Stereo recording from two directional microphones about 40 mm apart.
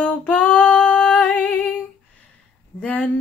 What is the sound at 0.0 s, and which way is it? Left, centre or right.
Female singing, left.